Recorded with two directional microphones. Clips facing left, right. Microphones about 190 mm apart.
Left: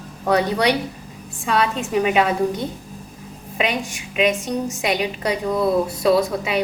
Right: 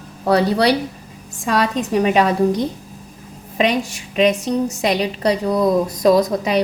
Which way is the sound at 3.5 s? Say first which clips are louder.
Right 5 dB; 35° right (ahead or behind).